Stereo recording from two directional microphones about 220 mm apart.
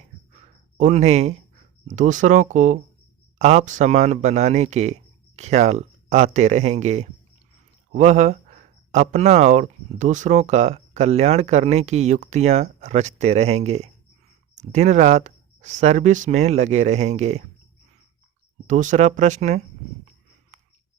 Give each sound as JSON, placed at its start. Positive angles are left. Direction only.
{"t": 0.8, "sound": "speech", "side_deg": -30}
{"t": 18.7, "sound": "speech", "side_deg": -35}